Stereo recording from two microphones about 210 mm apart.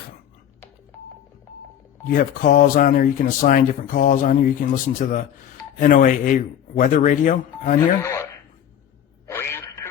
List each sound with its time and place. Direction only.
2.0 s speech: 45° left (ahead or behind)
8.0 s speech: 15° left (ahead or behind)
9.2 s radio: 10° left (ahead or behind)